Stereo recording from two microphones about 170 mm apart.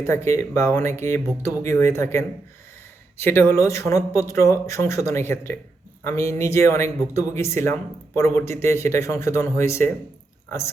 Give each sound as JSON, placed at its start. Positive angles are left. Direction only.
{"t": 0.0, "sound": "speech", "side_deg": 15}